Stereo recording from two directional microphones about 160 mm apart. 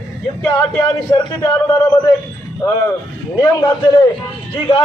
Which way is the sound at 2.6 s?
20° left (ahead or behind).